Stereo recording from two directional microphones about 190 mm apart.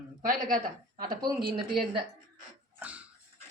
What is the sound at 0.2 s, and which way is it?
Speech, 45° right (ahead or behind).